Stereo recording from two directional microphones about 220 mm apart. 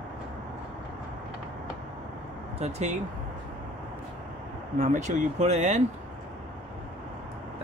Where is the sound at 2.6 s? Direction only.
30° right (ahead or behind).